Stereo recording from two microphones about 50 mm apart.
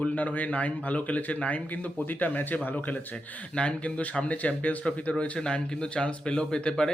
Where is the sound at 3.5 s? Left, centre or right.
Left.